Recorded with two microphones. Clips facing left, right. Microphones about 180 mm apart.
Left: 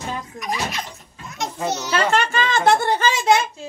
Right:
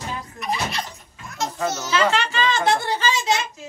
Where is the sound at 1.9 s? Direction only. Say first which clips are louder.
Left 1 dB; 50° left (ahead or behind).